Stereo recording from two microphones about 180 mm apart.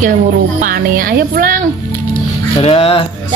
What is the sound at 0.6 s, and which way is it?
Speech, 50° right (ahead or behind).